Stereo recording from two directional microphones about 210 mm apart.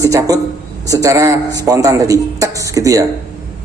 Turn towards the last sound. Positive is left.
turn(degrees=-15)  # may be behind; listen again after turning